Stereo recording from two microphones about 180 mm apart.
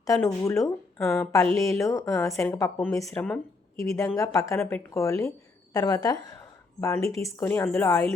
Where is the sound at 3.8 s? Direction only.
15° left (ahead or behind).